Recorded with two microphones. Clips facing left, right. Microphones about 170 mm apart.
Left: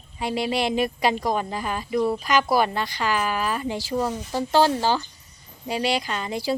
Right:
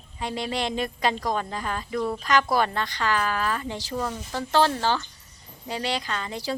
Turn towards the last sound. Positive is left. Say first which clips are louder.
# left 4 dB
turn(degrees=10)  # may be behind; listen again after turning